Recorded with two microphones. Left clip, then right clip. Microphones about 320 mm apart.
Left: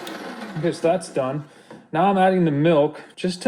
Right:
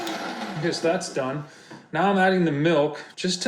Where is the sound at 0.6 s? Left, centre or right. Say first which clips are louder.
Left 4 dB; left.